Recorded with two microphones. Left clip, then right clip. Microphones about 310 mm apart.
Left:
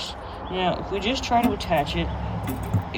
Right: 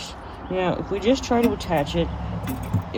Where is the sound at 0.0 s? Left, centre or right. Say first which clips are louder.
Left 3 dB; right.